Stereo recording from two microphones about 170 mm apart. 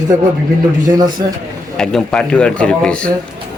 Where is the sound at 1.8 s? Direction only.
5° left (ahead or behind).